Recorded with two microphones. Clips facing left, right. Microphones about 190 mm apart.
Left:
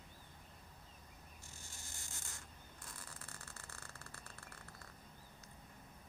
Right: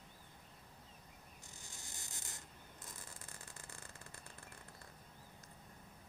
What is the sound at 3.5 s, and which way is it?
Vehicle, 15° right (ahead or behind).